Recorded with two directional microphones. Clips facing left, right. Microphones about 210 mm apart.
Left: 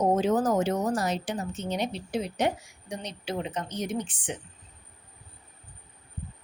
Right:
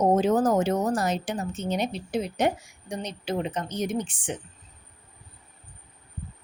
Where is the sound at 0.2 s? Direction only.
45° right (ahead or behind).